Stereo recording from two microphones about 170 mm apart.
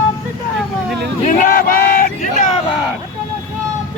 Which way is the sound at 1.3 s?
55° left (ahead or behind).